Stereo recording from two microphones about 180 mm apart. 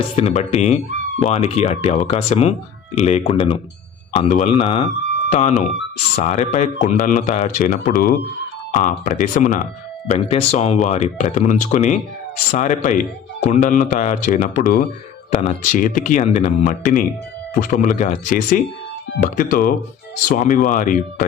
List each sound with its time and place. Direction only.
0.2 s speech: 35° left (ahead or behind)
10.2 s speech: 35° left (ahead or behind)